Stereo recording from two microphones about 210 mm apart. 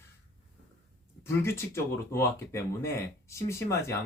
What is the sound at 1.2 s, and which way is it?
Speech, 10° left (ahead or behind).